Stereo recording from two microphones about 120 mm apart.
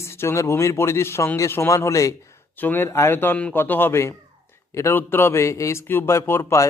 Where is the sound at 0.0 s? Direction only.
20° left (ahead or behind).